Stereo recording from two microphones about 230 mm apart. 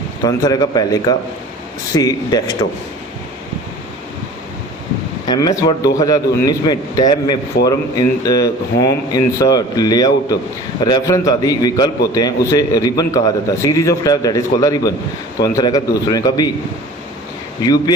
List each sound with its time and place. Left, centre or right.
0.3 s a man's voice: centre
5.3 s a man's voice: centre
17.6 s a man's voice: centre